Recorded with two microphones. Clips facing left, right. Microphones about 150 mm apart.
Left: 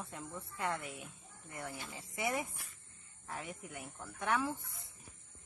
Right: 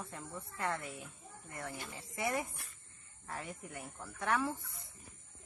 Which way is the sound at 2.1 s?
Centre (ahead or behind).